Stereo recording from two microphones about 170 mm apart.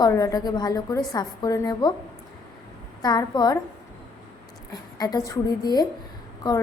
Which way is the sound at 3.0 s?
25° left (ahead or behind).